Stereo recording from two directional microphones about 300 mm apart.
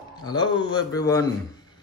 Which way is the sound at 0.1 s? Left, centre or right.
Centre.